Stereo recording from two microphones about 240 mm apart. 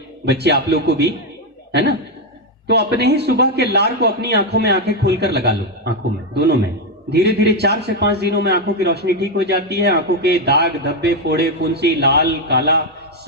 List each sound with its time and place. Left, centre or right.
0.3 s a man's voice: right
7.1 s a man's voice: right